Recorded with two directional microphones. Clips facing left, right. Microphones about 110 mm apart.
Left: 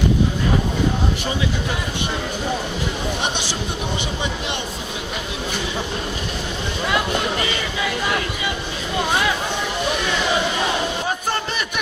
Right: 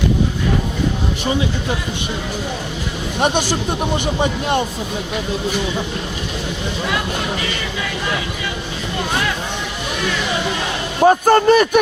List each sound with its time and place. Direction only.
4.2 s a man's voice: 45° right (ahead or behind)
11.0 s a man's voice: 50° right (ahead or behind)